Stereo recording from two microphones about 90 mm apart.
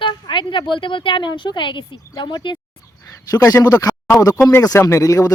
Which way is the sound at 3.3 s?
40° left (ahead or behind).